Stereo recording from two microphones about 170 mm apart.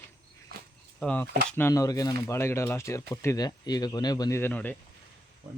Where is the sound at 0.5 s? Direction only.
65° right (ahead or behind).